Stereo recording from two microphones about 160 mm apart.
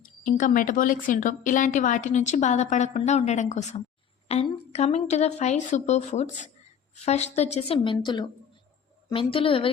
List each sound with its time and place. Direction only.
0.0 s a woman's voice: 55° left (ahead or behind); by 9.6 s 35° left (ahead or behind)